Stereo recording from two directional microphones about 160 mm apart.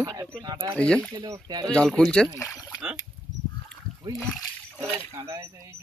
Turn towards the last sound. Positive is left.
turn(degrees=-20)  # may be behind; listen again after turning